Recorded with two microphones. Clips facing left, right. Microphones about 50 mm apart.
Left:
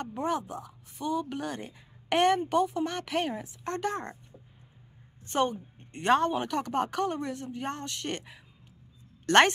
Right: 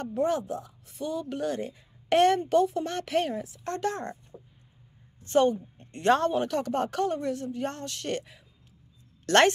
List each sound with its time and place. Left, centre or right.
0.0 s a woman's voice: left
5.3 s speech: centre